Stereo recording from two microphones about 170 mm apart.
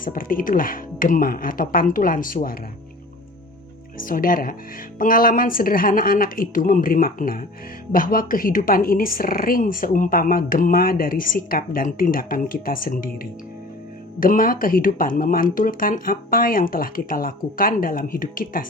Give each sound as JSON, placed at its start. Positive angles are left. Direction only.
{"t": 0.0, "sound": "speech", "side_deg": 55}
{"t": 3.9, "sound": "speech", "side_deg": 55}